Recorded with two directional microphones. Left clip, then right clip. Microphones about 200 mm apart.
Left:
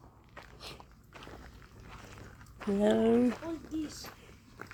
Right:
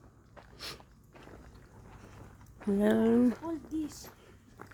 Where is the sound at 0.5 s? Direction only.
40° right (ahead or behind).